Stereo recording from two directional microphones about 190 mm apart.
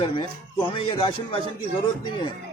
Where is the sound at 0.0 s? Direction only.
25° left (ahead or behind).